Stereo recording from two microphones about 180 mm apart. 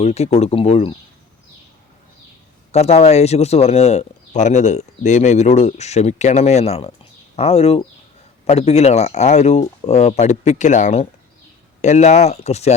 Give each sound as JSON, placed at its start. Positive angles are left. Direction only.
{"t": 0.0, "sound": "speech", "side_deg": 35}
{"t": 2.7, "sound": "speech", "side_deg": 35}